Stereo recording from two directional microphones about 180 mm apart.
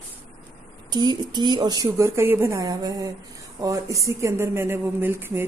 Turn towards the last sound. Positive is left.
turn(degrees=-15)  # may be behind; listen again after turning